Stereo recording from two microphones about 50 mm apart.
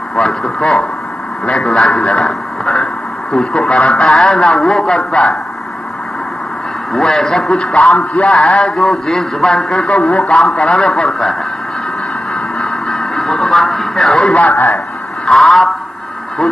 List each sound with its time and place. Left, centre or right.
0.1 s a man's voice: centre
1.9 s a man's voice: left
2.1 s speech: centre
6.9 s a man's voice: centre; by 8.3 s left
8.4 s a man's voice: centre
9.8 s a man's voice: left
12.5 s music: centre
14.5 s speech: left
15.2 s a sound: centre